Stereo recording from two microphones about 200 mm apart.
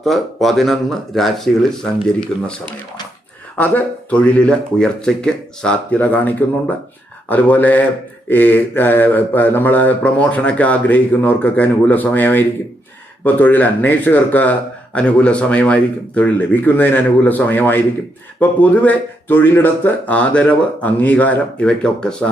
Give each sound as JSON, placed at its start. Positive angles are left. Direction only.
{"t": 0.0, "sound": "speech", "side_deg": 0}
{"t": 3.6, "sound": "mantra", "side_deg": 5}